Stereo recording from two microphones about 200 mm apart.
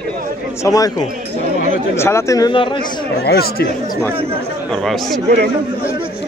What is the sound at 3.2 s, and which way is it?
Speech, 50° left (ahead or behind).